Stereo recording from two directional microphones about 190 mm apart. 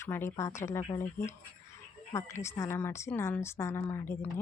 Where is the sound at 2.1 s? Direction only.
15° left (ahead or behind).